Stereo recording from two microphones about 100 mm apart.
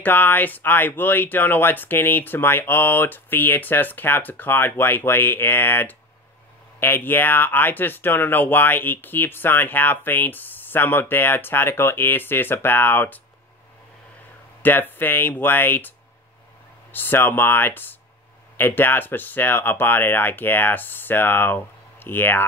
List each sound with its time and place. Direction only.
0.0 s speech: 20° left (ahead or behind)
14.6 s speech: 20° left (ahead or behind)
16.9 s speech: 20° left (ahead or behind)